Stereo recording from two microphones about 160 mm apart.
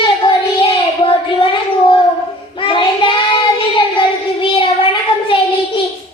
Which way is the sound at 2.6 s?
35° left (ahead or behind).